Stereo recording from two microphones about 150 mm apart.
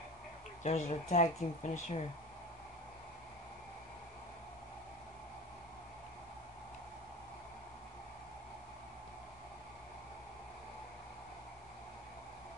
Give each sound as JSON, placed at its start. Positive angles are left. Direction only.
{"t": 0.7, "sound": "speech", "side_deg": 50}